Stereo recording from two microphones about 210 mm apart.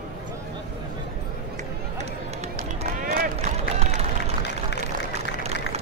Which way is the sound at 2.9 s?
40° right (ahead or behind).